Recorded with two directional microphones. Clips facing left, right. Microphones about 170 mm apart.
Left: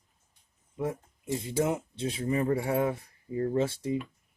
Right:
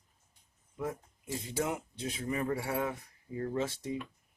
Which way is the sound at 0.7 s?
25° left (ahead or behind).